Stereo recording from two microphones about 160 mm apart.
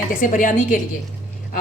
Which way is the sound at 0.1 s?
55° left (ahead or behind).